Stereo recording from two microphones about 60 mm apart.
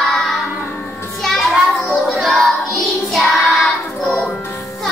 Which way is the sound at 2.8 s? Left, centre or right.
Centre.